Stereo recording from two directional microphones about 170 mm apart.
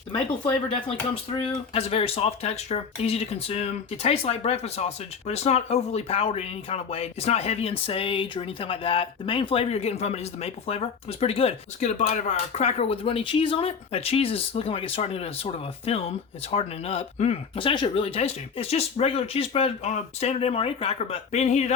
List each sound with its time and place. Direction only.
0.1 s speech: 30° left (ahead or behind)